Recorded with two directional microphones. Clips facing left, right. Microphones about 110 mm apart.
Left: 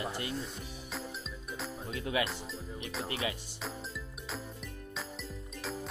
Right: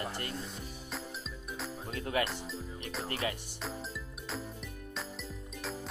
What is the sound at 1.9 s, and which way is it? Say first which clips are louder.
Music: even; 45° right (ahead or behind).